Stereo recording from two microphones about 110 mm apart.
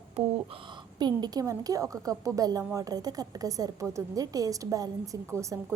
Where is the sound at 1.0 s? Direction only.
40° right (ahead or behind).